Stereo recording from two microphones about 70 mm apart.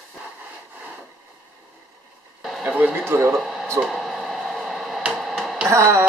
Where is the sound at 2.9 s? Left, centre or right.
Right.